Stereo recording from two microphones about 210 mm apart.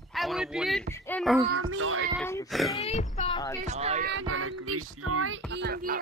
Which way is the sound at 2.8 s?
30° left (ahead or behind).